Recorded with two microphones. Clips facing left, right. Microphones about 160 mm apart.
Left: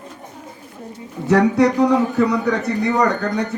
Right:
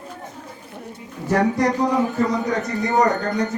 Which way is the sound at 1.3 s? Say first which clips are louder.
Left 4 dB; 70° left (ahead or behind).